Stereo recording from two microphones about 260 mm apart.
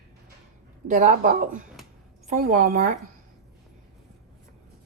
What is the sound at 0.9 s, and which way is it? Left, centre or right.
Speech, right.